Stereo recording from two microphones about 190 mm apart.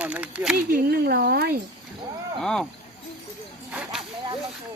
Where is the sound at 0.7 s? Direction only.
55° right (ahead or behind).